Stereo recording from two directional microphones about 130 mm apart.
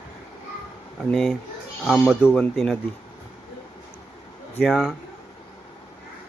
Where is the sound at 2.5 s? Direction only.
5° left (ahead or behind).